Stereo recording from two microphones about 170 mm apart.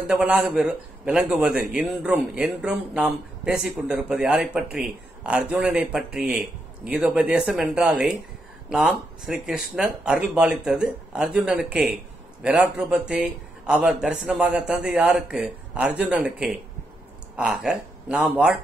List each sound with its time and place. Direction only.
0.0 s a man's voice: 10° right (ahead or behind)